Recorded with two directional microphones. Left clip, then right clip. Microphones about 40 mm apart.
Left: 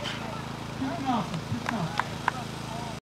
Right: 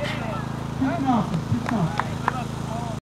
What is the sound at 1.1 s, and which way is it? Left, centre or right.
Speech, left.